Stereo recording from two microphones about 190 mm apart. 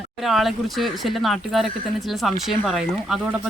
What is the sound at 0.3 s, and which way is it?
Speech, centre (ahead or behind).